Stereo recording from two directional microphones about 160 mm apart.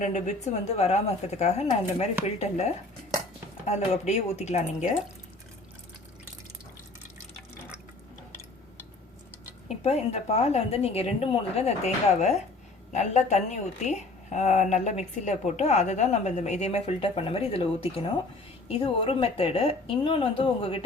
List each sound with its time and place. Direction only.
0.0 s a woman's voice: 50° left (ahead or behind)
9.6 s a woman's voice: 40° left (ahead or behind)